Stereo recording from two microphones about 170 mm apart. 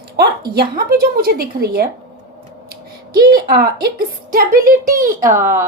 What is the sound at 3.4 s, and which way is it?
A child's voice, 65° right (ahead or behind).